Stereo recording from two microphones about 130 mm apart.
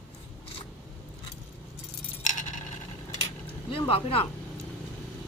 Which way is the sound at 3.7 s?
45° left (ahead or behind).